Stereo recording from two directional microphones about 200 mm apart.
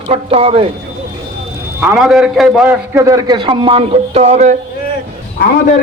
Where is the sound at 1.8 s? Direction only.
5° right (ahead or behind).